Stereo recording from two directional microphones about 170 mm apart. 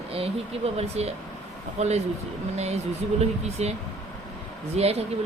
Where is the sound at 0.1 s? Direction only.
35° right (ahead or behind).